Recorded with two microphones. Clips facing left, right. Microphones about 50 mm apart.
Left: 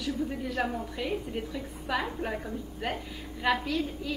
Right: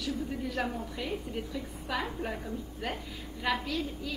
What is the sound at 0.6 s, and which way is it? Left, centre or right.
Speech, centre.